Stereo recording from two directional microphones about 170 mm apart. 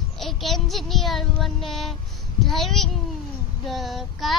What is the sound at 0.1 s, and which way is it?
Child singing, centre (ahead or behind).